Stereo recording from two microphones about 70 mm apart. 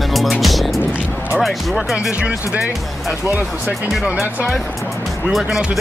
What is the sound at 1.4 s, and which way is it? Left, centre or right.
Speech, centre.